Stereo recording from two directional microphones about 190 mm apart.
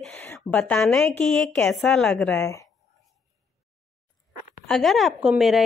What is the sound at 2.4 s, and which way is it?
Speech, 15° left (ahead or behind).